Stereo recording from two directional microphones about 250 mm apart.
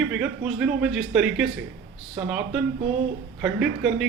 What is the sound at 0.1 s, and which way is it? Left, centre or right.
A man's voice, centre.